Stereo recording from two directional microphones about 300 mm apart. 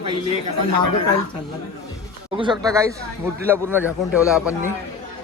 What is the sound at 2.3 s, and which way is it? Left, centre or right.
A man's voice, centre.